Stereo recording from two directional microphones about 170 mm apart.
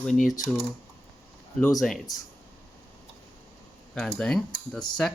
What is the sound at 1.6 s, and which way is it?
Speech, centre (ahead or behind).